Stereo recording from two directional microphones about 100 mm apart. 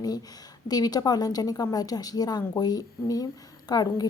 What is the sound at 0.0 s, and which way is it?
Speech, 40° left (ahead or behind).